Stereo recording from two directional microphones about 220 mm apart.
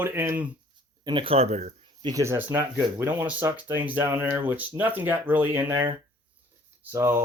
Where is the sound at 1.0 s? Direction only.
25° right (ahead or behind).